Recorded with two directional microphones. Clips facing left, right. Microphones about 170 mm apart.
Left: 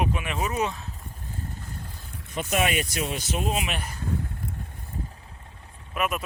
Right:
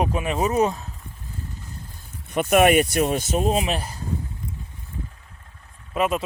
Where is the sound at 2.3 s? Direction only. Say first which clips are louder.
Right 9 dB; 60° right (ahead or behind); by 3.9 s 35° right (ahead or behind).